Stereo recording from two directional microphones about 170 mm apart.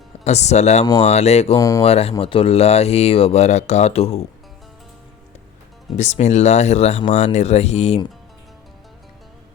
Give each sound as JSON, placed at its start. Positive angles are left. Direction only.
{"t": 0.3, "sound": "speech", "side_deg": 40}
{"t": 1.5, "sound": "speech", "side_deg": 20}
{"t": 1.8, "sound": "speech", "side_deg": 35}
{"t": 6.0, "sound": "speech", "side_deg": 40}